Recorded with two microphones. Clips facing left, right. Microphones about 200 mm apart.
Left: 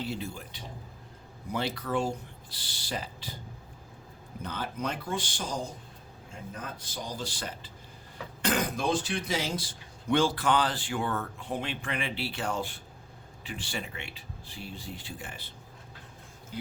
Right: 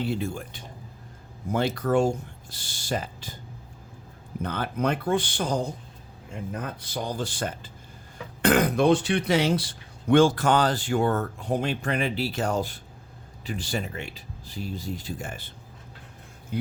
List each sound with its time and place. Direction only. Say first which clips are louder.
0.0 s speech: right 7 dB; 50° right (ahead or behind)
4.4 s speech: right 7 dB; 60° right (ahead or behind)
8.4 s speech: right 9 dB; 60° right (ahead or behind)
16.5 s speech: right 8 dB; 60° right (ahead or behind)